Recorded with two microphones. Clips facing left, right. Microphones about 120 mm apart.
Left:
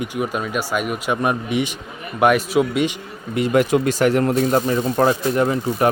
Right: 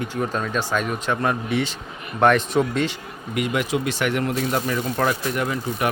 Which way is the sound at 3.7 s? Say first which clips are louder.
Left 6 dB; 45° left (ahead or behind).